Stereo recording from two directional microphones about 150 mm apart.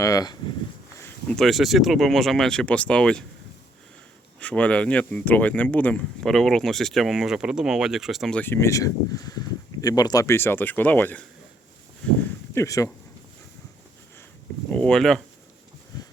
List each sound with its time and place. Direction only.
0.0 s speech: 25° left (ahead or behind)
0.9 s a sound: 15° left (ahead or behind)
1.4 s speech: centre (ahead or behind)
4.4 s speech: 10° left (ahead or behind)
8.4 s speech: 15° left (ahead or behind)
12.5 s speech: 20° left (ahead or behind)
14.7 s speech: 5° left (ahead or behind)